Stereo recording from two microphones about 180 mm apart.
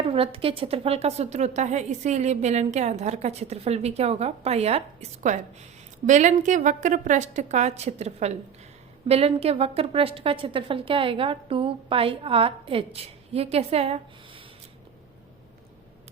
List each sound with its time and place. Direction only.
0.0 s a woman's voice: 30° right (ahead or behind)